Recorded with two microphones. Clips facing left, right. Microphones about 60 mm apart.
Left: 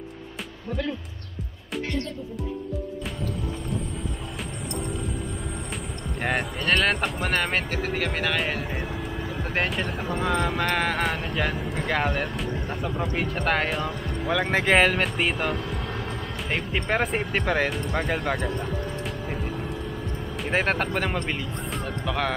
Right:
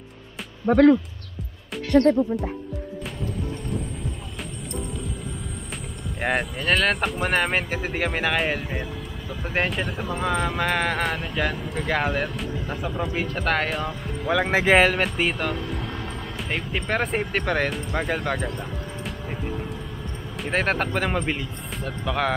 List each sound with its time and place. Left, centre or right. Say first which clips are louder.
0.7 s speech: right 15 dB; right
6.2 s speech: right 2 dB; centre
17.9 s music: right 2 dB; centre
20.3 s speech: right 1 dB; centre